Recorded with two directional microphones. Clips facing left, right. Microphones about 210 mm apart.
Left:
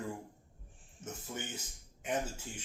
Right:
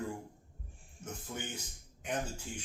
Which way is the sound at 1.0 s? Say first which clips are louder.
Even; 5° left (ahead or behind).